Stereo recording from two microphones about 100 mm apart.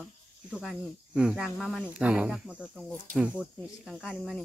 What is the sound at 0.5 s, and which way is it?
Speech, 5° right (ahead or behind).